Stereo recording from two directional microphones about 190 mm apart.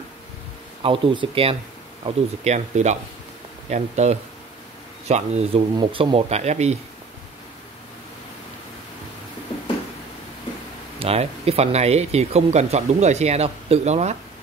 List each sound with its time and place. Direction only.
0.8 s speech: 30° right (ahead or behind)
11.0 s speech: 30° right (ahead or behind)